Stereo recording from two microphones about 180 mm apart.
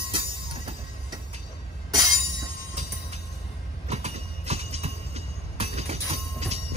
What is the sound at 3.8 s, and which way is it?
Train, 35° right (ahead or behind).